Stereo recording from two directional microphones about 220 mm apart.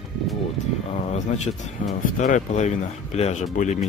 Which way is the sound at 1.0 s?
30° left (ahead or behind).